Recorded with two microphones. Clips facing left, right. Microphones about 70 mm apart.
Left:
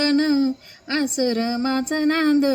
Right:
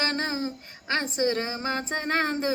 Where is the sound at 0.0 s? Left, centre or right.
Right.